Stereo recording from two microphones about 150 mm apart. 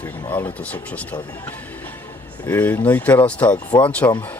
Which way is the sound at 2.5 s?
10° left (ahead or behind).